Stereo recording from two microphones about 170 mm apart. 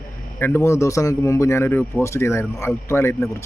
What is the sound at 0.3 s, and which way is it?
Speech, 15° left (ahead or behind).